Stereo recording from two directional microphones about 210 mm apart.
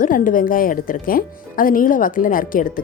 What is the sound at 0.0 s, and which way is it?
Speech, 40° left (ahead or behind).